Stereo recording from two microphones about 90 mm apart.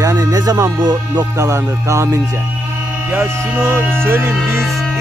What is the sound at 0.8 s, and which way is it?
Music, 50° right (ahead or behind).